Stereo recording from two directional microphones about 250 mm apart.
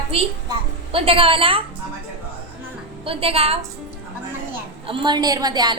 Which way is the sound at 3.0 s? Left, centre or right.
Right.